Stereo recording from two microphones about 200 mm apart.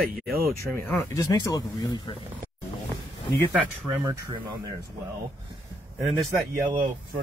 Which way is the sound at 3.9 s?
10° right (ahead or behind).